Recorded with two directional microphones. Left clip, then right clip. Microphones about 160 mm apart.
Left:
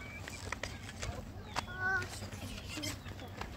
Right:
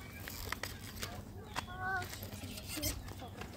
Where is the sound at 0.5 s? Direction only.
60° right (ahead or behind).